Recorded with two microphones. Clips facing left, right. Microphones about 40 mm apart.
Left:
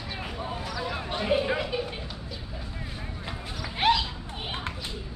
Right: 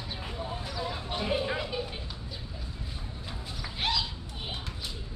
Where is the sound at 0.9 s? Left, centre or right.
Left.